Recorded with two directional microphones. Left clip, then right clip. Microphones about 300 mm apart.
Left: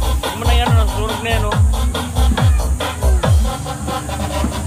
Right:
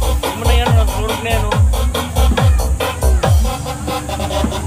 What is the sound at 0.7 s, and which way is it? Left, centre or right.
Speech, right.